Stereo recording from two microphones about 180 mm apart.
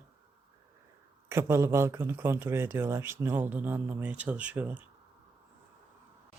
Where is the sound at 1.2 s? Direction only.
15° right (ahead or behind).